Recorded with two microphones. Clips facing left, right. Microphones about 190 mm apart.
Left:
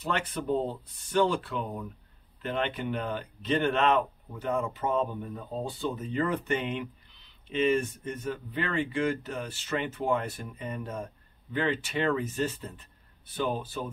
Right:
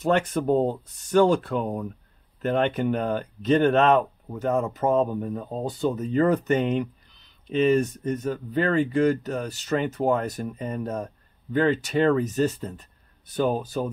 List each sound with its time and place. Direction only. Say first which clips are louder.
0.0 s speech: right 9 dB; 45° right (ahead or behind)